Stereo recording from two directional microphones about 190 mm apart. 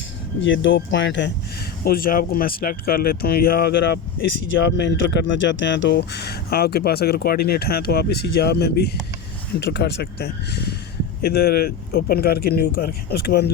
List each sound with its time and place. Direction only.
0.3 s speech: 75° left (ahead or behind)
1.8 s speech: 50° left (ahead or behind)